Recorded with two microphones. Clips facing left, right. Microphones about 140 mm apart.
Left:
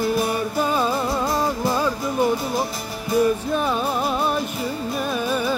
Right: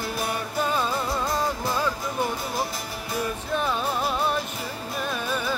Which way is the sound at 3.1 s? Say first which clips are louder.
Left 10 dB; centre (ahead or behind).